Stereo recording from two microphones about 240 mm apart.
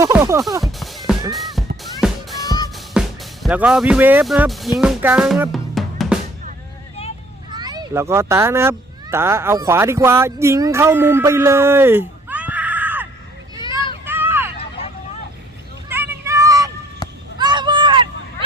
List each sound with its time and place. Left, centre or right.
0.0 s music: centre
0.6 s music: centre
2.4 s music: centre
2.7 s speech: centre
4.8 s music: centre
7.5 s a child's voice: centre
13.6 s a sound: centre
14.0 s vehicle: centre
14.6 s vehicle: left
15.9 s vehicle: centre
17.0 s a sound: centre
17.3 s a sound: centre